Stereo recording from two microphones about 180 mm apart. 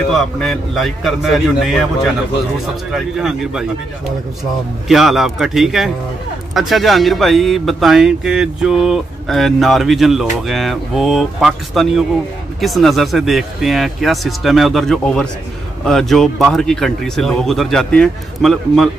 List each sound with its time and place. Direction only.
0.1 s speech: centre (ahead or behind)
2.9 s speech: centre (ahead or behind)
4.8 s speech: centre (ahead or behind)